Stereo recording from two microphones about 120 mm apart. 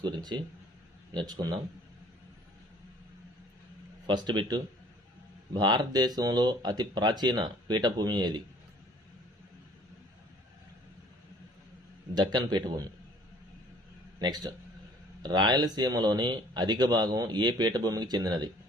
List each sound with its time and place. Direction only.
0.0 s speech: 35° right (ahead or behind)
4.0 s speech: 40° right (ahead or behind)
12.1 s speech: 40° right (ahead or behind)
14.2 s speech: 35° right (ahead or behind)